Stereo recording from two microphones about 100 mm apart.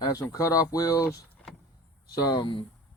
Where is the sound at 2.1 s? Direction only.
45° left (ahead or behind).